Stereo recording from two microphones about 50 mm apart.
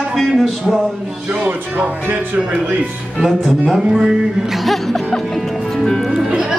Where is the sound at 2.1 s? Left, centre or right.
Right.